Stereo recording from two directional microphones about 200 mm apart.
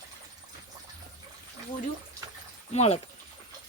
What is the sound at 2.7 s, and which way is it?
Speech, 30° left (ahead or behind).